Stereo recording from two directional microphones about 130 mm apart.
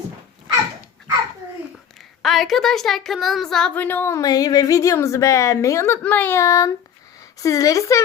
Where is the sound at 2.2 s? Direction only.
Centre (ahead or behind); by 8.0 s 25° left (ahead or behind).